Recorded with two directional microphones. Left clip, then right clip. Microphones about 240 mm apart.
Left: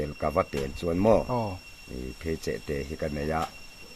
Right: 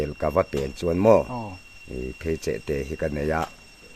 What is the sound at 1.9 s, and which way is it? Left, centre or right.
A man's voice, right.